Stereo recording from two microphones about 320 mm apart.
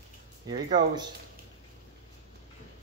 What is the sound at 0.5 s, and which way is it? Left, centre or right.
Speech, centre.